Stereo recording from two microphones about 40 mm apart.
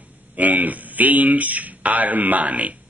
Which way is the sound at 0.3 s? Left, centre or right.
Right.